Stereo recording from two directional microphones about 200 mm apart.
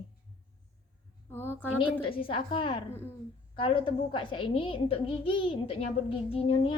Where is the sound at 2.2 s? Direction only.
25° left (ahead or behind).